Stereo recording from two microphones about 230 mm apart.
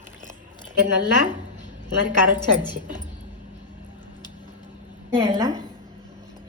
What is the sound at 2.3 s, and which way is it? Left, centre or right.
Speech, centre.